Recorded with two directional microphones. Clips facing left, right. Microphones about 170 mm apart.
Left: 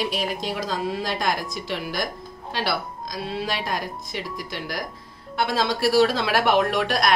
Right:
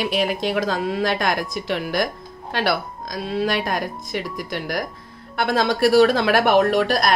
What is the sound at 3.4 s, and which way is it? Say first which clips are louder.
Speech: right 5 dB; 55° right (ahead or behind).